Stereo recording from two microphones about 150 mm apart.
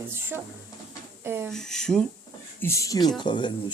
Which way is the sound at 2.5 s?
20° left (ahead or behind).